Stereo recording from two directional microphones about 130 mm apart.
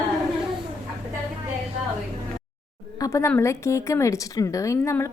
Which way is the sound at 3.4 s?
20° left (ahead or behind).